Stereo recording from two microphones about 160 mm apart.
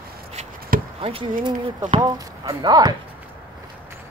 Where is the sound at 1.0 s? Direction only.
35° right (ahead or behind).